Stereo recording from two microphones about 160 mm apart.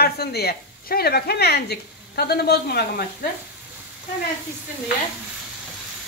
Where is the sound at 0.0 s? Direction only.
80° left.